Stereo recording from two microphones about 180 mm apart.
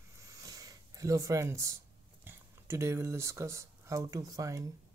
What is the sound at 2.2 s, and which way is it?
Speech, 15° right (ahead or behind).